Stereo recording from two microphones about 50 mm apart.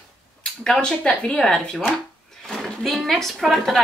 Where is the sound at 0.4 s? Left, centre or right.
Centre.